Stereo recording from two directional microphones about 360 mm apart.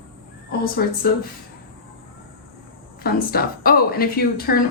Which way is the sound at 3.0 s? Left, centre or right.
Left.